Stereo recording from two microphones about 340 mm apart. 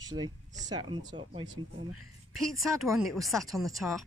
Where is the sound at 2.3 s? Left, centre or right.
Centre.